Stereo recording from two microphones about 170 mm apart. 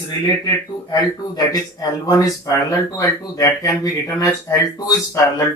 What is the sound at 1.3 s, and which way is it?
Speech, 20° left (ahead or behind).